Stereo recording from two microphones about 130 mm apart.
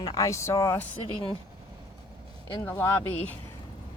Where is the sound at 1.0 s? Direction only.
45° left (ahead or behind).